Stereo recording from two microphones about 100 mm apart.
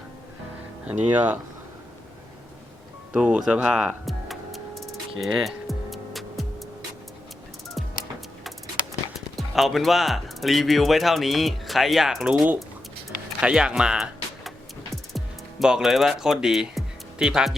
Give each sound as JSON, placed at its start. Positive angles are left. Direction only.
{"t": 0.9, "sound": "speech", "side_deg": -15}
{"t": 3.1, "sound": "speech", "side_deg": -10}
{"t": 4.0, "sound": "music", "side_deg": 0}
{"t": 9.3, "sound": "speech", "side_deg": 0}
{"t": 15.1, "sound": "music", "side_deg": 0}